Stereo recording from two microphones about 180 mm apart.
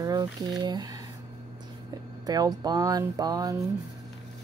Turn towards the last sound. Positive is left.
turn(degrees=-20)  # may be behind; listen again after turning